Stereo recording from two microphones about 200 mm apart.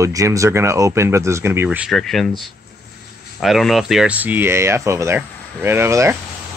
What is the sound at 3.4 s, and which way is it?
Speech, centre (ahead or behind).